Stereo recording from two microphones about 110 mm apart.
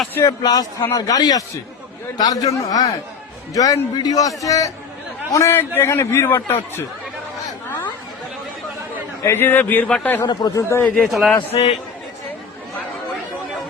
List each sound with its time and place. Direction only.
0.1 s speech: 25° left (ahead or behind)
0.4 s a man's voice: 35° left (ahead or behind); by 6.8 s 20° left (ahead or behind)
9.2 s a man's voice: 20° left (ahead or behind)
10.2 s a man's voice: 40° left (ahead or behind)
10.6 s a man's voice: 25° left (ahead or behind)
10.9 s a man's voice: centre (ahead or behind)
11.5 s a man's voice: 50° left (ahead or behind)